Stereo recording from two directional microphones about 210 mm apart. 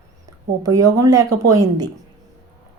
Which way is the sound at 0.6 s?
15° right (ahead or behind).